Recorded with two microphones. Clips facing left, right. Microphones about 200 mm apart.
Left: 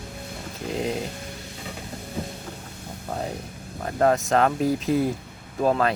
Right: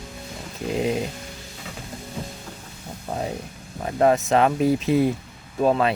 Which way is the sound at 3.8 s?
10° right (ahead or behind).